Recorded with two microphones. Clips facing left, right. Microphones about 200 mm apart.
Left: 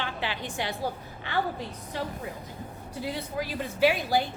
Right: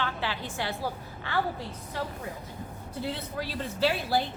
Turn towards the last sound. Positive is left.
turn(degrees=15)  # may be behind; listen again after turning